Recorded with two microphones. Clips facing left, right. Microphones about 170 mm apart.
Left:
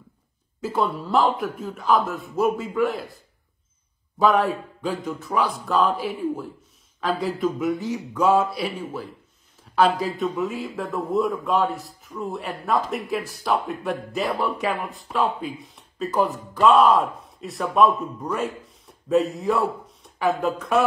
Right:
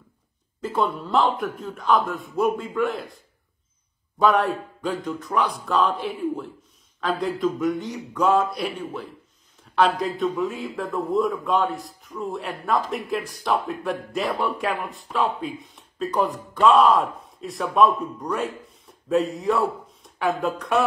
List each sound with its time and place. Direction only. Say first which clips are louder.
0.6 s a man's voice: even; 5° left (ahead or behind)
4.2 s a man's voice: even; centre (ahead or behind)